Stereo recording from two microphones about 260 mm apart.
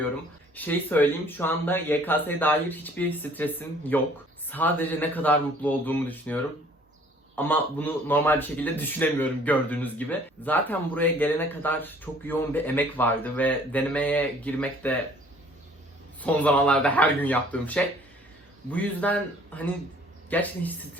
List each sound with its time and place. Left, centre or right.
0.5 s speech: centre
16.2 s speech: centre